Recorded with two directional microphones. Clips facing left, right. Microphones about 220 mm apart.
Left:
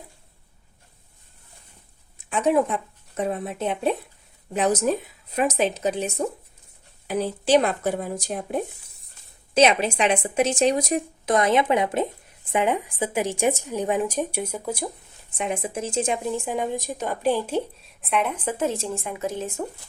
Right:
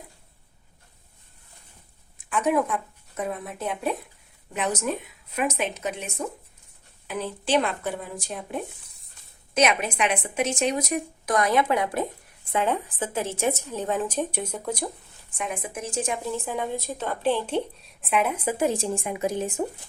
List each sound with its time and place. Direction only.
2.1 s speech: 25° left (ahead or behind)
9.6 s a woman's voice: 30° left (ahead or behind); by 14.8 s 5° left (ahead or behind)
15.4 s a woman's voice: 25° left (ahead or behind); by 19.9 s 20° right (ahead or behind)